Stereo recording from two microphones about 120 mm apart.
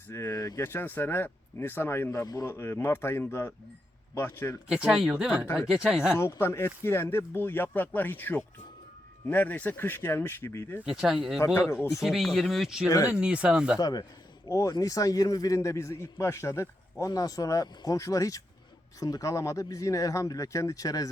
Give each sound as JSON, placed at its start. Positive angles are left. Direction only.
{"t": 0.1, "sound": "a man's voice", "side_deg": 20}
{"t": 4.7, "sound": "speech", "side_deg": -5}
{"t": 6.1, "sound": "a man's voice", "side_deg": 20}
{"t": 10.8, "sound": "speech", "side_deg": -5}
{"t": 11.3, "sound": "a man's voice", "side_deg": 25}
{"t": 12.0, "sound": "speech", "side_deg": 0}
{"t": 13.7, "sound": "a man's voice", "side_deg": 35}